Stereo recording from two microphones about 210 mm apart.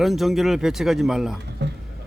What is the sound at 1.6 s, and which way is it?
Speech, 55° right (ahead or behind).